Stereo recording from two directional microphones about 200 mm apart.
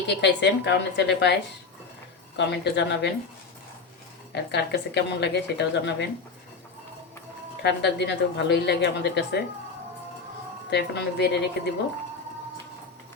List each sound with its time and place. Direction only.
0.1 s a woman's voice: 60° left (ahead or behind)
4.3 s a woman's voice: 55° left (ahead or behind)
7.6 s a woman's voice: 60° left (ahead or behind)
10.7 s a woman's voice: 60° left (ahead or behind)